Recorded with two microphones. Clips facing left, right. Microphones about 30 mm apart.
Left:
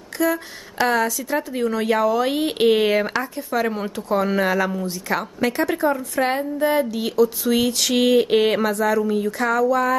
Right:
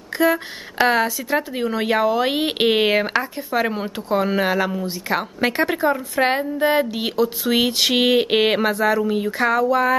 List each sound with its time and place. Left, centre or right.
0.2 s speech: right